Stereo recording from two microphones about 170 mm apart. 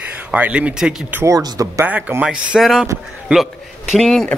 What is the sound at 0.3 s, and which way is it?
Speech, 5° right (ahead or behind).